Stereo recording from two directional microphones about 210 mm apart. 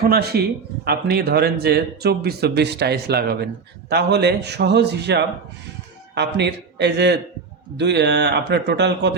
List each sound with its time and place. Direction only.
0.1 s speech: 50° right (ahead or behind)